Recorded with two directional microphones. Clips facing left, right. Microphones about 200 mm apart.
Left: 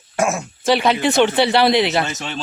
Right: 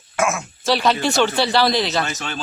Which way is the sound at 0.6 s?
55° left (ahead or behind).